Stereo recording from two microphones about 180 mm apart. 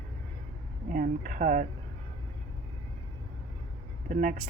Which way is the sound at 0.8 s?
45° right (ahead or behind).